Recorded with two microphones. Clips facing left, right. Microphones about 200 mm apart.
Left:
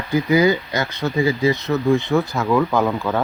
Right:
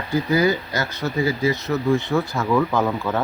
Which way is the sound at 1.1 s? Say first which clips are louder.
Left 3 dB; 15° left (ahead or behind).